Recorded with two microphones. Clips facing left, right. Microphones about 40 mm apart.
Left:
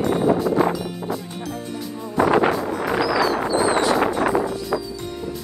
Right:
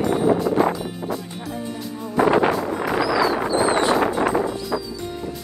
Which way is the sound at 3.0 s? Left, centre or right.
Centre.